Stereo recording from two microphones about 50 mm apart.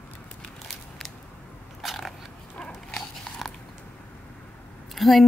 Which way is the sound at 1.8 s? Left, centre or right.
Centre.